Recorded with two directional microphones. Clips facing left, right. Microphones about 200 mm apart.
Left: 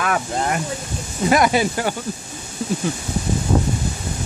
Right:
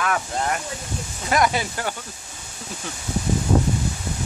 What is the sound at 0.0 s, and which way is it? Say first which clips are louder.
Speech: left 3 dB; 15° left (ahead or behind).